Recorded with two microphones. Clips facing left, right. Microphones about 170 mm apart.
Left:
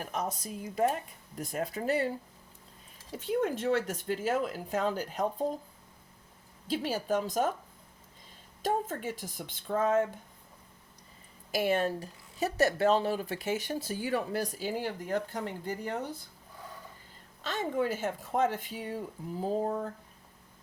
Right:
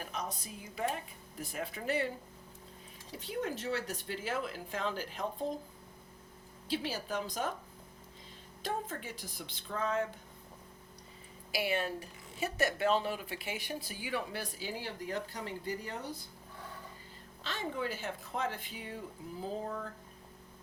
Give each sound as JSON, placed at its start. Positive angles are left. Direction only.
{"t": 0.1, "sound": "speech", "side_deg": 45}
{"t": 3.2, "sound": "speech", "side_deg": 50}
{"t": 6.7, "sound": "speech", "side_deg": 45}
{"t": 8.6, "sound": "speech", "side_deg": 45}
{"t": 11.5, "sound": "speech", "side_deg": 45}
{"t": 17.4, "sound": "speech", "side_deg": 50}